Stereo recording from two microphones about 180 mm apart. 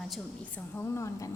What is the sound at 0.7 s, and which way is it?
Speech, 15° left (ahead or behind).